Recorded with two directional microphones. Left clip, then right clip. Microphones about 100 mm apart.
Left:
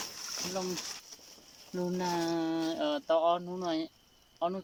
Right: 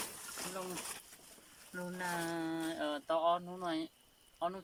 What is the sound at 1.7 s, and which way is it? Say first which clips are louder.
Speech: left 7 dB; 35° left (ahead or behind).